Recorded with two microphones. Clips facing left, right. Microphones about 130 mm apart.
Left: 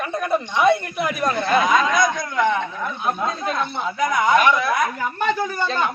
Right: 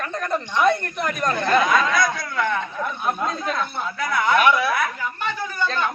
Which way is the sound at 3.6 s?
20° left (ahead or behind).